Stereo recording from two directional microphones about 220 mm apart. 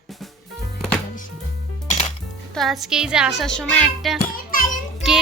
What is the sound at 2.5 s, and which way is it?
A woman's voice, centre (ahead or behind).